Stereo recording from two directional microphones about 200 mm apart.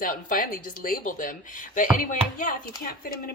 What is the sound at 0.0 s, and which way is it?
Speech, 45° left (ahead or behind).